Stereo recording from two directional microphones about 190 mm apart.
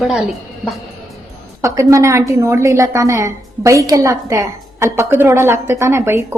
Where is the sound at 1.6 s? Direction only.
15° right (ahead or behind).